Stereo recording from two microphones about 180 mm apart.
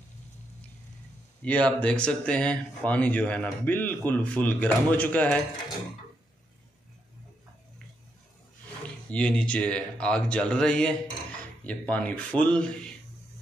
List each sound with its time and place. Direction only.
1.4 s speech: 5° left (ahead or behind)
9.1 s speech: 5° left (ahead or behind)